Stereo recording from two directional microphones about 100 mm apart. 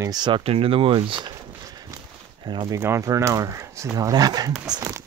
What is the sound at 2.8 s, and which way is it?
Speech, 30° right (ahead or behind).